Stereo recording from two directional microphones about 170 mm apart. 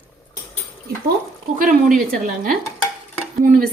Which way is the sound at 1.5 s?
50° right (ahead or behind).